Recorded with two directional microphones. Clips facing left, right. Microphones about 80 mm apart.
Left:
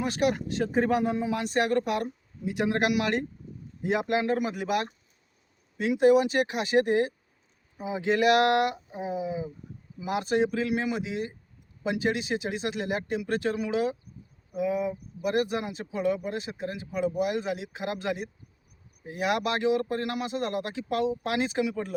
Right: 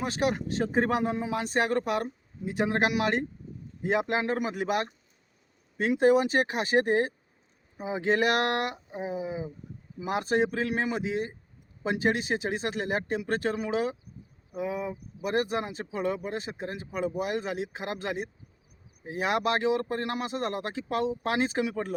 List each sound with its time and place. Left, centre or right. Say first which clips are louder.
0.0 s a man's voice: left 2 dB; right